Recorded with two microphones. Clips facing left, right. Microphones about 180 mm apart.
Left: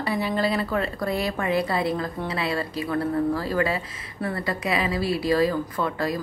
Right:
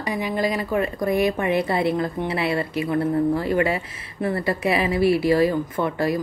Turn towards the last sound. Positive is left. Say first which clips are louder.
# right 3 dB
turn(degrees=-25)  # may be behind; listen again after turning